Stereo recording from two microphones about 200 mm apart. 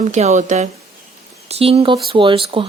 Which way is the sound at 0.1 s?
35° right (ahead or behind).